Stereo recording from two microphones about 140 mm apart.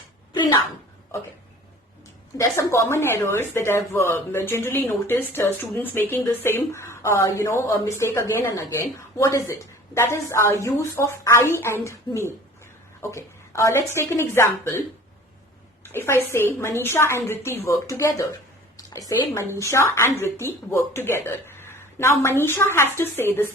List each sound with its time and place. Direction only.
2.4 s speech: 20° left (ahead or behind)
15.8 s a woman's voice: 15° left (ahead or behind)